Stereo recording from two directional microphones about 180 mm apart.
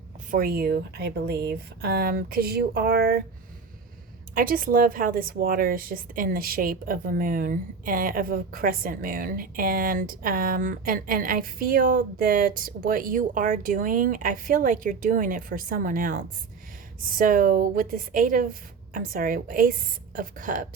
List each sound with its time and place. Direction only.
0.3 s speech: 55° right (ahead or behind)
4.4 s a woman's voice: 50° right (ahead or behind)